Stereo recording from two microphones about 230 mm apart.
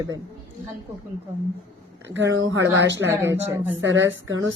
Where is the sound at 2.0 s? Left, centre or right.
Right.